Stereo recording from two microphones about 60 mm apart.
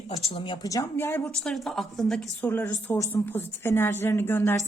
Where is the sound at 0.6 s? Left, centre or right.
Left.